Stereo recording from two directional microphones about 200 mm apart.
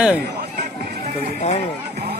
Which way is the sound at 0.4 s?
55° right (ahead or behind).